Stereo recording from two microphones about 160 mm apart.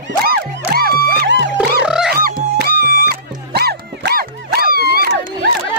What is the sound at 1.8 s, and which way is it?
Music, 5° right (ahead or behind).